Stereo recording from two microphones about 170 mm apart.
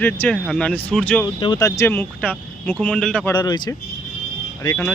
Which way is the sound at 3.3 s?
25° left (ahead or behind).